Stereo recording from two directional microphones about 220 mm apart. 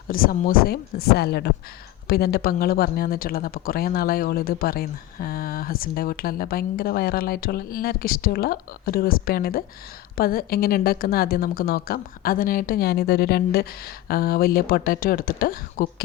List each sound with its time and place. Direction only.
0.1 s speech: 40° left (ahead or behind)